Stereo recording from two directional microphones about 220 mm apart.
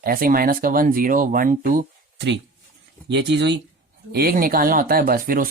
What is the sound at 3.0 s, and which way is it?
Speech, 55° right (ahead or behind).